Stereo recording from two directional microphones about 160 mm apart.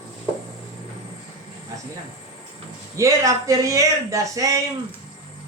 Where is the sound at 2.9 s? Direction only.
20° right (ahead or behind).